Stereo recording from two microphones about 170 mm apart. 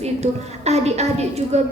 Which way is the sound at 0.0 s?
40° right (ahead or behind).